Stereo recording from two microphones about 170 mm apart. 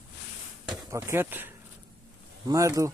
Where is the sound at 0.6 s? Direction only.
Centre (ahead or behind).